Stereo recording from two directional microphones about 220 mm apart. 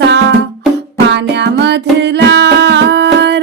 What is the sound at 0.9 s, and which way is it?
Music, 50° right (ahead or behind).